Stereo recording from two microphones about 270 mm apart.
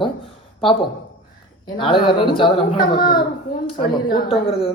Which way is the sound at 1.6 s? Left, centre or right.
Centre.